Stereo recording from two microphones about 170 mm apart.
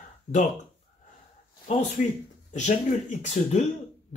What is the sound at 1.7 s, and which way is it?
Speech, 45° left (ahead or behind).